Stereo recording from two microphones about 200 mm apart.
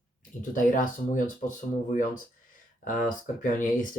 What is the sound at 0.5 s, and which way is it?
Speech, 40° left (ahead or behind).